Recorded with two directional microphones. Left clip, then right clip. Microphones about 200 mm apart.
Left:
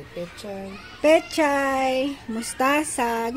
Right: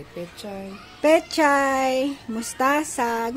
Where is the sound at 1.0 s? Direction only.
5° right (ahead or behind).